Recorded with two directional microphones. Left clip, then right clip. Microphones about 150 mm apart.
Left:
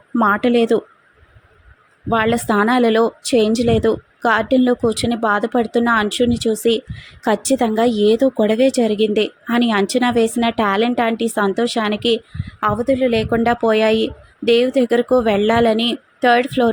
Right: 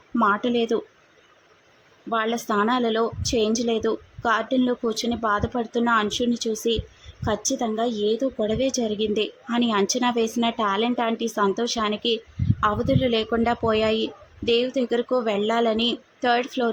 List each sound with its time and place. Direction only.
0.2 s speech: 30° left (ahead or behind)
2.0 s a woman's voice: 35° left (ahead or behind)